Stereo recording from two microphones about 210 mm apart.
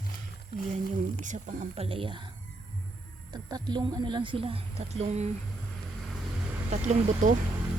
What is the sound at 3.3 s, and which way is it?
A woman's voice, 20° right (ahead or behind).